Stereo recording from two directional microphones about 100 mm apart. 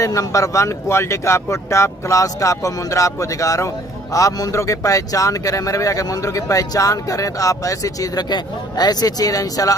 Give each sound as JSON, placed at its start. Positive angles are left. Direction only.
{"t": 0.0, "sound": "speech", "side_deg": 35}